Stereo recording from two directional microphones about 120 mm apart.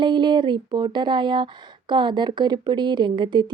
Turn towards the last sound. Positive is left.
turn(degrees=-40)  # may be behind; listen again after turning